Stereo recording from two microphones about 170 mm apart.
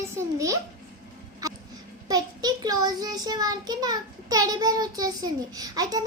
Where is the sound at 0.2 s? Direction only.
20° right (ahead or behind).